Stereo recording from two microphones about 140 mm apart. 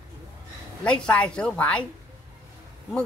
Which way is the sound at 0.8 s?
10° left (ahead or behind).